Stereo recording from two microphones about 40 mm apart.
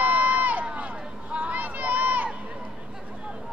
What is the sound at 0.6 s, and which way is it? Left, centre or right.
Run, right.